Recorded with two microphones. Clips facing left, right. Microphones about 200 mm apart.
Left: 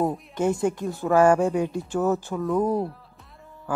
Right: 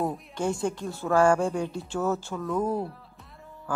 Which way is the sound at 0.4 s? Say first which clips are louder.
Left 5 dB; 20° left (ahead or behind).